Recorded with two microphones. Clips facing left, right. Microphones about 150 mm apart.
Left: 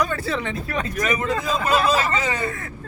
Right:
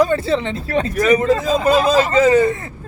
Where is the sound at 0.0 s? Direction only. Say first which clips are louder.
Right 8 dB; 30° right (ahead or behind).